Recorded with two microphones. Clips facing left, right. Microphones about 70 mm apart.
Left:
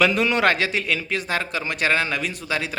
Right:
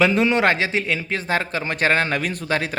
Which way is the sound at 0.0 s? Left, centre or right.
Right.